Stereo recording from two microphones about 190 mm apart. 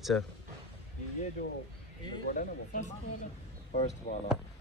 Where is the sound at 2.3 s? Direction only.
45° left (ahead or behind).